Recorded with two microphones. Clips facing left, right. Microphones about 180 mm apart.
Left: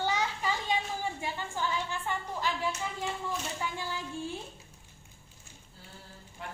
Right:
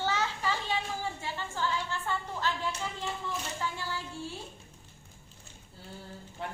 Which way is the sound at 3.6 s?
15° left (ahead or behind).